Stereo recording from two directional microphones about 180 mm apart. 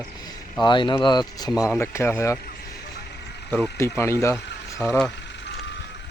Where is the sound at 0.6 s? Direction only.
25° left (ahead or behind).